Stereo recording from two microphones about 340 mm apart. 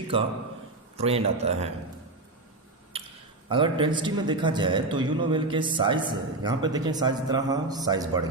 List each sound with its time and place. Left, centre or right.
0.9 s a man's voice: centre
2.9 s a sound: centre
3.5 s a man's voice: centre